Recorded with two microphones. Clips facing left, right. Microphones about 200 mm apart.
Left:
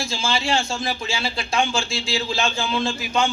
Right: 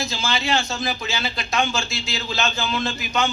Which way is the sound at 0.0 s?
30° left (ahead or behind).